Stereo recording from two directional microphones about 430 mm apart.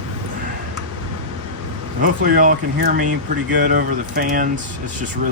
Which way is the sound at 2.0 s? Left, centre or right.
Centre.